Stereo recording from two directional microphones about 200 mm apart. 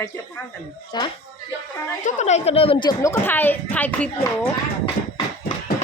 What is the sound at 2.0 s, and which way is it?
Speech, 35° left (ahead or behind).